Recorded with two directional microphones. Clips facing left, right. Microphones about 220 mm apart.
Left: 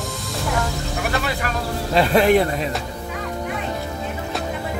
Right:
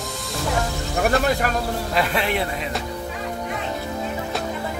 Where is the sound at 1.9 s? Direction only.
35° left (ahead or behind).